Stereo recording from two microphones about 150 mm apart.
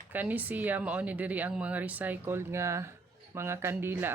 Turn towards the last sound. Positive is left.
turn(degrees=-15)  # may be behind; listen again after turning